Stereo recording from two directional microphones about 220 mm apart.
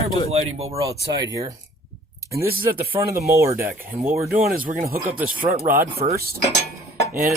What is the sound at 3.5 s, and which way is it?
Speech, 40° right (ahead or behind).